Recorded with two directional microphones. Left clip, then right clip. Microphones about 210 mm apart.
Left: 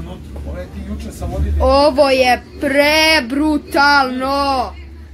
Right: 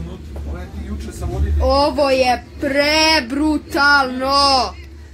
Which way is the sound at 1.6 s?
15° left (ahead or behind).